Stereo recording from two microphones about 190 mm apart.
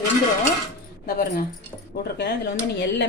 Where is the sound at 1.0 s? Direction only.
45° left (ahead or behind).